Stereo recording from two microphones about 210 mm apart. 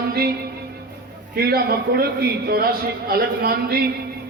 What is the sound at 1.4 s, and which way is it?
A man's voice, 45° right (ahead or behind).